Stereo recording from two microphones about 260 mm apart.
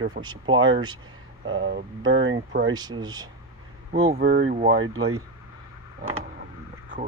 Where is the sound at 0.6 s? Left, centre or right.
Right.